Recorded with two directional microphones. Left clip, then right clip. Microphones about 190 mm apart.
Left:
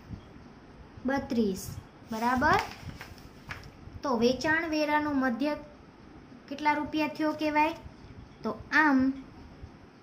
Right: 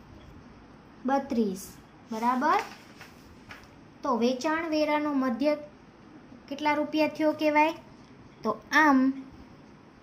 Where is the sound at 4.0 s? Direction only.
5° left (ahead or behind).